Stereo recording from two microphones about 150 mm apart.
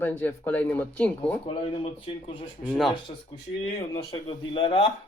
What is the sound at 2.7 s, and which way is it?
Speech, centre (ahead or behind).